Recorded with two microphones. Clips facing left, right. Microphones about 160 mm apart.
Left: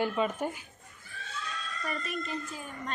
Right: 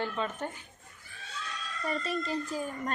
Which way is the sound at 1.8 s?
30° right (ahead or behind).